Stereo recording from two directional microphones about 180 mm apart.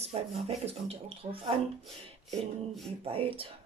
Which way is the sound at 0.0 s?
35° right (ahead or behind).